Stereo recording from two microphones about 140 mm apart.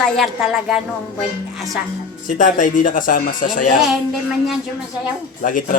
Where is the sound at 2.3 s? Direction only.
70° left (ahead or behind).